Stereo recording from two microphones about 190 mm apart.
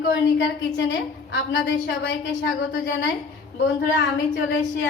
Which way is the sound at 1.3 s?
65° left (ahead or behind).